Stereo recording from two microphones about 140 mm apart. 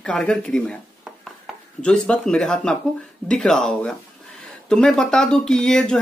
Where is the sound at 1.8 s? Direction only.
5° left (ahead or behind).